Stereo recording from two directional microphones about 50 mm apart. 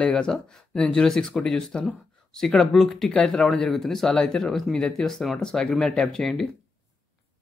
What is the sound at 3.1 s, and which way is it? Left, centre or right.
Speech, centre.